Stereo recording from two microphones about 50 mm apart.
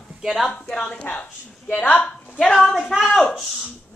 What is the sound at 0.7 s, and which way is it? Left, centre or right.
Speech, centre.